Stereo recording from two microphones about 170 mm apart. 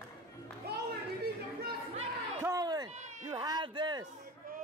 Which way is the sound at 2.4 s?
20° right (ahead or behind).